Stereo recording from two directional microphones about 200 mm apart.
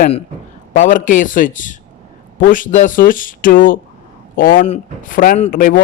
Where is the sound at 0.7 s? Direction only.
40° left (ahead or behind).